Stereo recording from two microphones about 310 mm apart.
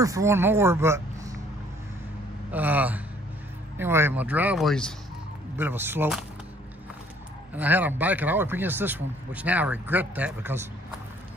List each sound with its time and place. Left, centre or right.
0.0 s speech: centre
2.5 s speech: centre
7.5 s speech: centre